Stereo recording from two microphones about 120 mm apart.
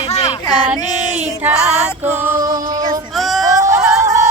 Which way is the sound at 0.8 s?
35° left (ahead or behind).